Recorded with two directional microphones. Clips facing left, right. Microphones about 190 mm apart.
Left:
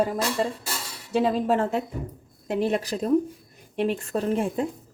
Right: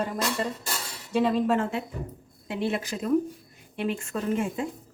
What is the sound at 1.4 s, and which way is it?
A woman's voice, 35° left (ahead or behind).